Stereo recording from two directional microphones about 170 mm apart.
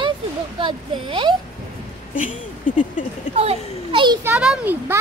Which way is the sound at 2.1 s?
50° left (ahead or behind).